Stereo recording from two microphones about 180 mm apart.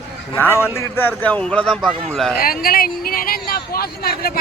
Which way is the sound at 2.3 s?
55° left (ahead or behind).